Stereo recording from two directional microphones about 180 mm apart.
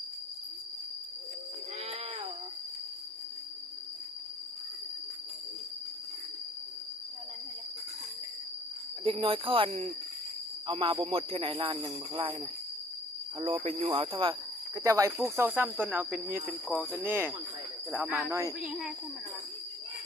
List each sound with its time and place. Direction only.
9.0 s speech: 30° right (ahead or behind)
13.4 s speech: 30° right (ahead or behind)
14.8 s speech: 20° right (ahead or behind)
18.6 s speech: centre (ahead or behind)